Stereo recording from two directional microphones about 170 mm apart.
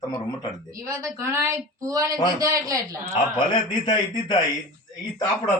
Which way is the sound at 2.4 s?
20° right (ahead or behind).